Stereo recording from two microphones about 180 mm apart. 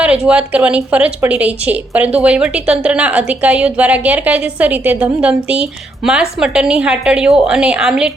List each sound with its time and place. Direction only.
0.0 s a woman's voice: 5° right (ahead or behind)